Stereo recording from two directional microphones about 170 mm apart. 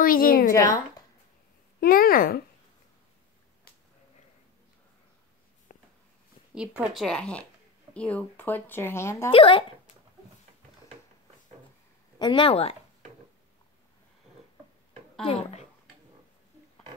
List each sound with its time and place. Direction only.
0.0 s a woman's voice: 55° left (ahead or behind)
0.5 s a woman's voice: 20° left (ahead or behind)
1.8 s speech: 60° left (ahead or behind)
5.7 s a sound: 50° left (ahead or behind)
6.5 s a woman's voice: 5° right (ahead or behind); by 9.3 s 15° left (ahead or behind)
9.3 s speech: 30° left (ahead or behind)
12.2 s speech: 30° left (ahead or behind)
15.2 s speech: 35° left (ahead or behind)